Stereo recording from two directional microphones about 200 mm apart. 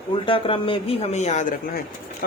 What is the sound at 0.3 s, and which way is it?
Speech, 25° left (ahead or behind).